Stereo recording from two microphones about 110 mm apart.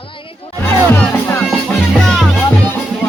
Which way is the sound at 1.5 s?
5° left (ahead or behind).